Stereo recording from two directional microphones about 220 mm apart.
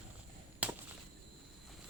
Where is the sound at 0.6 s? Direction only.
5° right (ahead or behind).